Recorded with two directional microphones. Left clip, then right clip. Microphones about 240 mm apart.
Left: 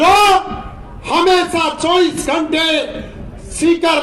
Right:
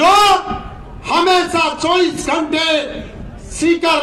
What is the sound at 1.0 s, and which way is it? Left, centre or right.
Speech, left.